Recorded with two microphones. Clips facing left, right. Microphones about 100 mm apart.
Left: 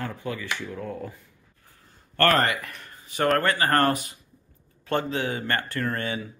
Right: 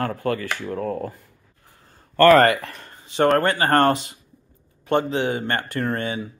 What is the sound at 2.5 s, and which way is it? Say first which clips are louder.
Speech: right 4 dB; 30° right (ahead or behind).